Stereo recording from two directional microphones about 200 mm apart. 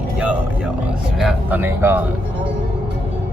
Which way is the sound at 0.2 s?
5° right (ahead or behind).